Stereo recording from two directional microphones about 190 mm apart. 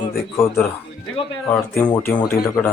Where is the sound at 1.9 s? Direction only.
10° left (ahead or behind).